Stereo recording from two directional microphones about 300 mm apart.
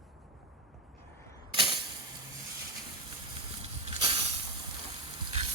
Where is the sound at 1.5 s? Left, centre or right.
Centre.